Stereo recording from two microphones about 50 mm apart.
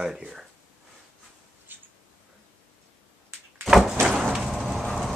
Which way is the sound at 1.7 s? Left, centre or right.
Right.